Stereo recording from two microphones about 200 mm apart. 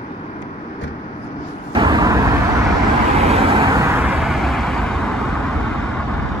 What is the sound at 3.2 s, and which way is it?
Vehicle, 30° right (ahead or behind).